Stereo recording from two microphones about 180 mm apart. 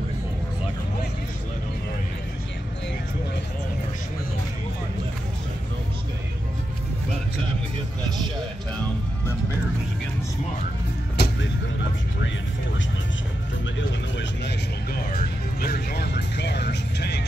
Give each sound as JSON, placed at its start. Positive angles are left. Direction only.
{"t": 11.2, "sound": "vehicle", "side_deg": 65}
{"t": 13.7, "sound": "music", "side_deg": 75}
{"t": 15.1, "sound": "music", "side_deg": 60}